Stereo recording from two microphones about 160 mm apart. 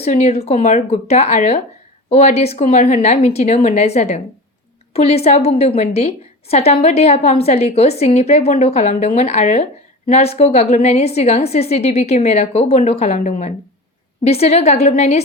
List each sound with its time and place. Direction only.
0.0 s a woman's voice: 40° left (ahead or behind)